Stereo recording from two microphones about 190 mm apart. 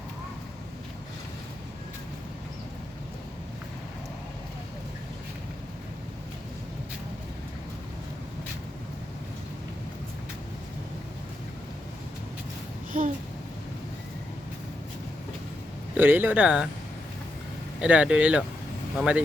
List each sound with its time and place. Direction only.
12.9 s a sound: 45° right (ahead or behind)
16.0 s speech: 10° right (ahead or behind)
17.7 s speech: 5° right (ahead or behind)